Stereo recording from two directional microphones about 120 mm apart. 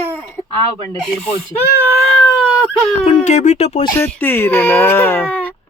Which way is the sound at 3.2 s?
75° left (ahead or behind).